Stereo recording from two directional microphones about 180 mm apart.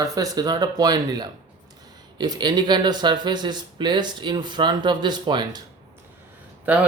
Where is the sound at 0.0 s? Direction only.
20° right (ahead or behind).